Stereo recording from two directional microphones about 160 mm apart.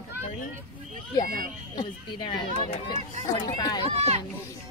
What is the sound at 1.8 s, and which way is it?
Speech, 35° left (ahead or behind).